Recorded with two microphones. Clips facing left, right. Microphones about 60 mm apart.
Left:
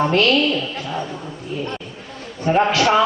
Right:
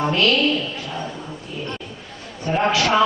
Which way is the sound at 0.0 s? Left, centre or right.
Left.